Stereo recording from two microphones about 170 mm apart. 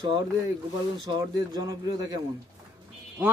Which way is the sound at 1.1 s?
25° right (ahead or behind).